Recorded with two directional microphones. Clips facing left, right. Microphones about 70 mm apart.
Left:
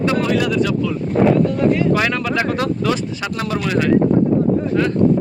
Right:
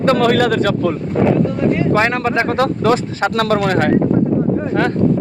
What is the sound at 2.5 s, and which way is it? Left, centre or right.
Speech, right.